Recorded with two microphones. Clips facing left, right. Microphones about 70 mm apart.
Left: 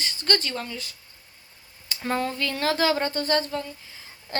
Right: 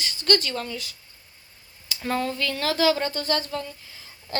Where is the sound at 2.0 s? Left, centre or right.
Centre.